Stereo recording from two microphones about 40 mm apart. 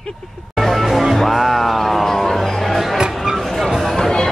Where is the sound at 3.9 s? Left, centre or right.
Centre.